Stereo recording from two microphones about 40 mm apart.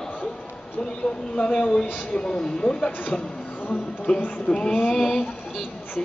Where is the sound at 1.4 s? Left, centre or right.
Left.